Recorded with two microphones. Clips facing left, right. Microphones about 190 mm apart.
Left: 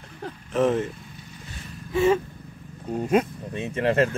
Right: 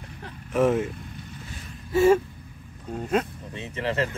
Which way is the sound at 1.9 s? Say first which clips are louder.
Right 2 dB; 5° right (ahead or behind).